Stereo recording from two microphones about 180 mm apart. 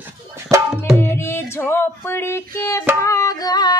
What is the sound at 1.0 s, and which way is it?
Music, 15° left (ahead or behind).